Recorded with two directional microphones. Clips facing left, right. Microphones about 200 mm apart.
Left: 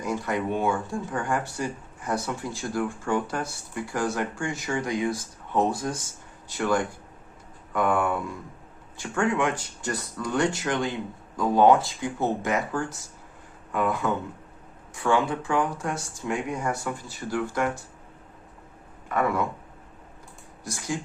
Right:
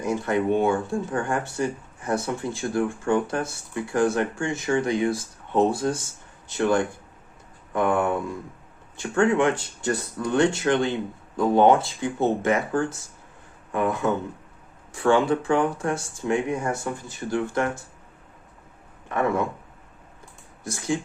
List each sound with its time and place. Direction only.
0.0 s speech: 25° right (ahead or behind)
9.0 s speech: 30° right (ahead or behind)
13.7 s speech: 25° right (ahead or behind)
19.0 s speech: 25° right (ahead or behind)
20.7 s speech: 25° right (ahead or behind)